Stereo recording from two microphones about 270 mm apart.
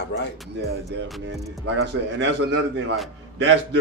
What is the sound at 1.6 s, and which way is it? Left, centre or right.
A man's voice, right.